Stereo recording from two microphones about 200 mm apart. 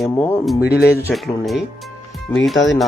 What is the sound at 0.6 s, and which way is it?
Speech, 50° left (ahead or behind).